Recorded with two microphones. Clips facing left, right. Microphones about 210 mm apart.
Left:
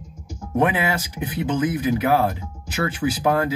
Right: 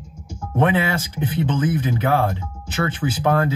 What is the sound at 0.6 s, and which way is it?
Speech, 30° right (ahead or behind).